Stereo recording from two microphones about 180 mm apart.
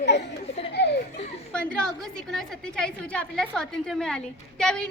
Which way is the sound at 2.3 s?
5° left (ahead or behind).